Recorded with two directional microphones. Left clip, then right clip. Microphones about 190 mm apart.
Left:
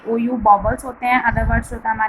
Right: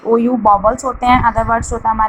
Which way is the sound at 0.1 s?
20° right (ahead or behind).